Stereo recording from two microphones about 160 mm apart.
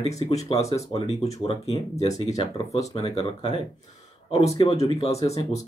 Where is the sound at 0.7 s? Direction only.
20° left (ahead or behind).